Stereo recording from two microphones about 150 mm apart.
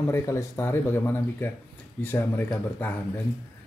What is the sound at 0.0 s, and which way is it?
Speech, 20° left (ahead or behind).